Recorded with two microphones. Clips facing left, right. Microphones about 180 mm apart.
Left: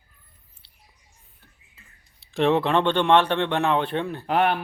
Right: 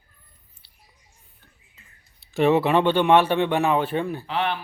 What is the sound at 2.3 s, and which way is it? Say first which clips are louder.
A man's voice: right 2 dB; 5° right (ahead or behind).